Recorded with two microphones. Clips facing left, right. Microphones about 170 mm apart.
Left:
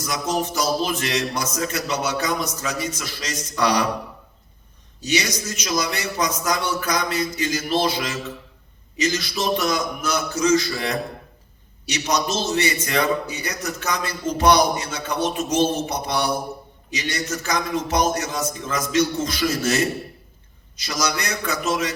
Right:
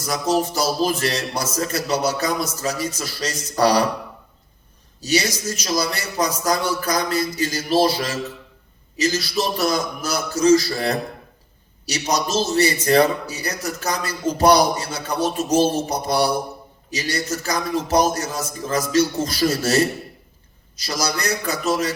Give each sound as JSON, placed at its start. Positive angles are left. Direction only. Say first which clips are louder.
{"t": 0.0, "sound": "a man's voice", "louder": "right 4 dB", "side_deg": -35}
{"t": 4.9, "sound": "a man's voice", "louder": "right 2 dB", "side_deg": -35}